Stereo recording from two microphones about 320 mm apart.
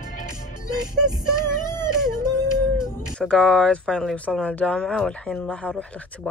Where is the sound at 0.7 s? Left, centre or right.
Centre.